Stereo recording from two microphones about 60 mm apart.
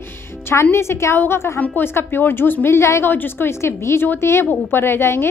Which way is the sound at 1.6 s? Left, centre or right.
Left.